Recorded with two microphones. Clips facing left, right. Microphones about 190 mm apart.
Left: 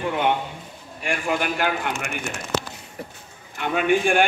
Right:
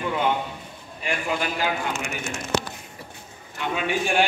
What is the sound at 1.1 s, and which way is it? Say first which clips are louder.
A man's voice: left 2 dB; 55° left (ahead or behind).